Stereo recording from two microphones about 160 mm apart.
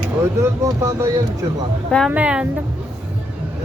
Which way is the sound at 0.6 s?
20° right (ahead or behind).